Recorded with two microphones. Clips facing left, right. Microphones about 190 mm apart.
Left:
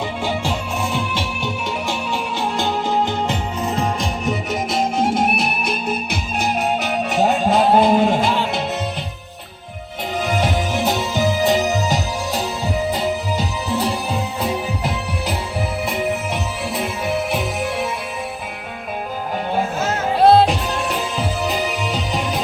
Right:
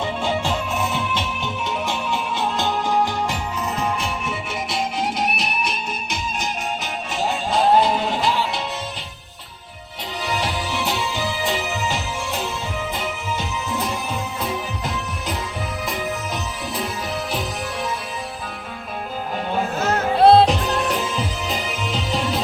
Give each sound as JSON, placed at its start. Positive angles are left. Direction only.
{"t": 2.6, "sound": "music", "side_deg": 20}
{"t": 10.2, "sound": "music", "side_deg": 50}
{"t": 20.1, "sound": "music", "side_deg": 5}